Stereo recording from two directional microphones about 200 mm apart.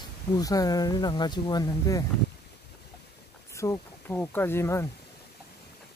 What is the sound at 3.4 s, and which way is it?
Speech, 15° left (ahead or behind).